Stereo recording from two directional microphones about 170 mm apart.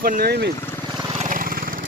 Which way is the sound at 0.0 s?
60° right (ahead or behind).